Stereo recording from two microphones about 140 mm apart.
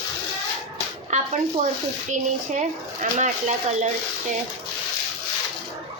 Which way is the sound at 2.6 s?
60° right (ahead or behind).